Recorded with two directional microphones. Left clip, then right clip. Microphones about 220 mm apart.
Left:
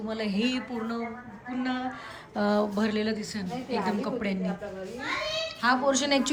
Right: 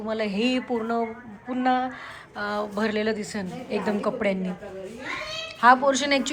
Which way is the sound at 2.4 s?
25° left (ahead or behind).